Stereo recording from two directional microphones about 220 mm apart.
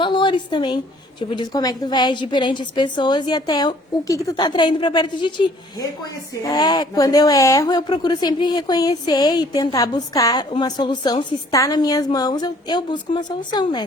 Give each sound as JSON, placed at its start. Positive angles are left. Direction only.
{"t": 0.0, "sound": "a woman's voice", "side_deg": 20}
{"t": 6.4, "sound": "a woman's voice", "side_deg": 20}